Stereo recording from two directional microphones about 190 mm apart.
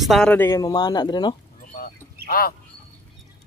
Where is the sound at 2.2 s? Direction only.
50° left (ahead or behind).